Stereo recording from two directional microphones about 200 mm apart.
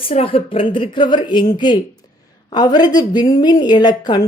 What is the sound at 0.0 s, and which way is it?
A woman's voice, 30° left (ahead or behind).